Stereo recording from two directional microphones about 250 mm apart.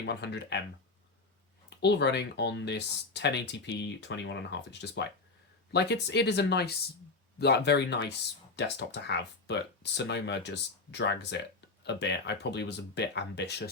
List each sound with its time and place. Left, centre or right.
0.0 s speech: left
1.8 s speech: left